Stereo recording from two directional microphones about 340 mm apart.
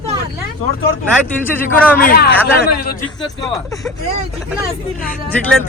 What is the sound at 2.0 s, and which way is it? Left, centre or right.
A man's voice, left.